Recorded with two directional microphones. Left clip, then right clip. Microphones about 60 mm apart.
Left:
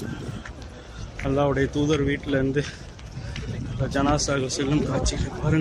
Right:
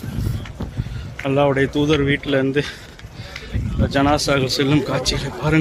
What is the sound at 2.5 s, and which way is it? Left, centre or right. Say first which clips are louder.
Speech: right 6 dB; right.